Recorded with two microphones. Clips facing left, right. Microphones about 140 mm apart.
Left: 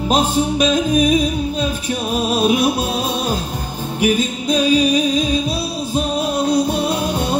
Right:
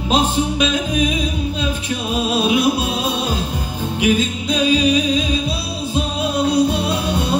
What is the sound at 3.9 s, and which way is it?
Music, 45° left (ahead or behind).